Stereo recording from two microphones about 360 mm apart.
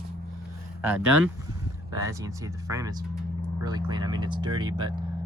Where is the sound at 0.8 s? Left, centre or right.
Centre.